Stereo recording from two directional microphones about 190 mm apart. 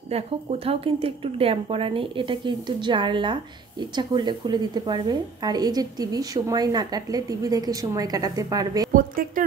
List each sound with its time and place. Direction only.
0.1 s a woman's voice: 30° right (ahead or behind)
8.9 s a woman's voice: 45° right (ahead or behind)